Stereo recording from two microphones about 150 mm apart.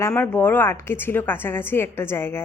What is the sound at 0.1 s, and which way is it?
A woman's voice, 15° left (ahead or behind).